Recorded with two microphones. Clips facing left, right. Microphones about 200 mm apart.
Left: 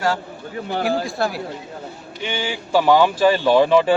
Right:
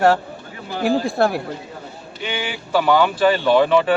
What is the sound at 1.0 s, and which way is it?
Speech, 55° right (ahead or behind).